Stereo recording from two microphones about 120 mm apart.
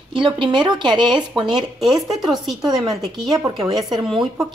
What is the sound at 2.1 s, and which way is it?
Speech, centre (ahead or behind).